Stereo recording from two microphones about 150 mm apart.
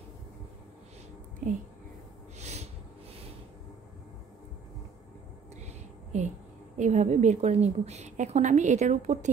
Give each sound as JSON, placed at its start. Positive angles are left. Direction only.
{"t": 1.4, "sound": "speech", "side_deg": -55}
{"t": 2.3, "sound": "a sound", "side_deg": -50}
{"t": 6.1, "sound": "a woman's voice", "side_deg": -50}